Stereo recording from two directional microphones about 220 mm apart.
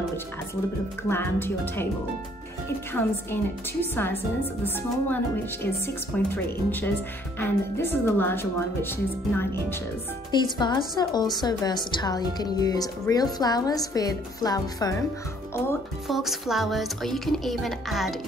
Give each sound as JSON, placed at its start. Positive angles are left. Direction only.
{"t": 1.0, "sound": "speech", "side_deg": 10}
{"t": 2.9, "sound": "speech", "side_deg": 10}
{"t": 16.1, "sound": "speech", "side_deg": 0}